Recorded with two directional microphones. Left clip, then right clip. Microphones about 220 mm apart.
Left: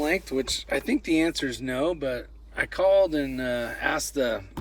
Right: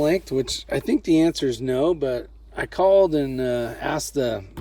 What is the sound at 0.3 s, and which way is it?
Speech, 25° right (ahead or behind).